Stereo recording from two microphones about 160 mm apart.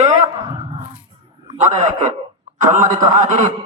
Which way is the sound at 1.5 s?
45° right (ahead or behind).